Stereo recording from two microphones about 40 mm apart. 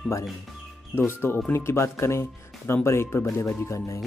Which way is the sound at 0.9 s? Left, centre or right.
Left.